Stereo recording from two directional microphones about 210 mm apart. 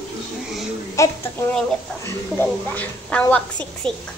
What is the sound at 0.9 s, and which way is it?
A woman's voice, 15° left (ahead or behind).